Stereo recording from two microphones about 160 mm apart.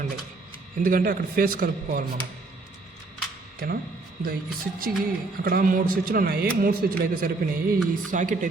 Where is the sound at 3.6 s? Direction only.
75° right (ahead or behind).